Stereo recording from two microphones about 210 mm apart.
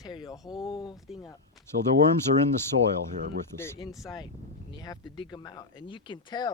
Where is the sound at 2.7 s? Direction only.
60° right (ahead or behind).